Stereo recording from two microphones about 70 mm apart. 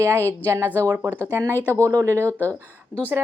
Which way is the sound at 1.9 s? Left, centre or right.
Right.